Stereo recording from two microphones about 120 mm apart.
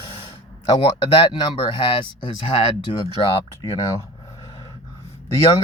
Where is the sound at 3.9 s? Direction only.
30° left (ahead or behind).